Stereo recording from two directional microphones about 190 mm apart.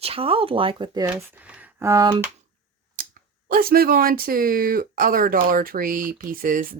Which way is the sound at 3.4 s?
50° right (ahead or behind).